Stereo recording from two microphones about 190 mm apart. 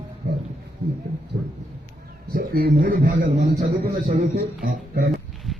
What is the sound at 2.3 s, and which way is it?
A man's voice, 50° right (ahead or behind).